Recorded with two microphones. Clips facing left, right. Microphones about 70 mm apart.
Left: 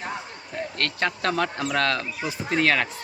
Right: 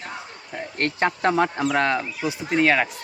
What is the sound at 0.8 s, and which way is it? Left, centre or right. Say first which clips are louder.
Speech: right 5 dB; right.